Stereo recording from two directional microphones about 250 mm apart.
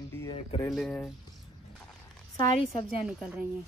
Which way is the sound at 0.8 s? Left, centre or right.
Centre.